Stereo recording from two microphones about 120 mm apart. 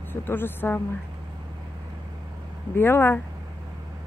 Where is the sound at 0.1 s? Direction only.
15° left (ahead or behind).